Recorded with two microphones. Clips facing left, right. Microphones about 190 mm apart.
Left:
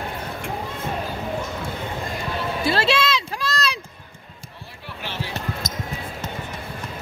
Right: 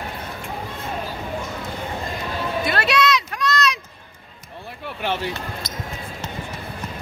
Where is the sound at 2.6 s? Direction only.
30° left (ahead or behind).